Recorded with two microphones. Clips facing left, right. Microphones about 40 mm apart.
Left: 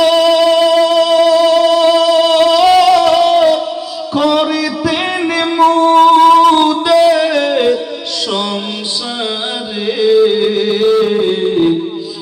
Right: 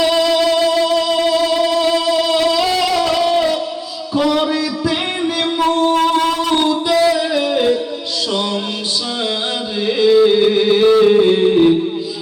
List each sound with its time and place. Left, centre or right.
0.0 s music: left
4.1 s a sound: left
5.5 s music: left
6.6 s music: left
9.8 s music: centre